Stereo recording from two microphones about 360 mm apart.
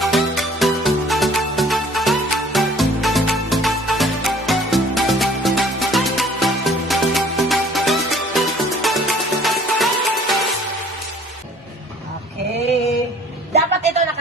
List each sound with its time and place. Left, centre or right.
0.0 s music: centre
13.5 s music: centre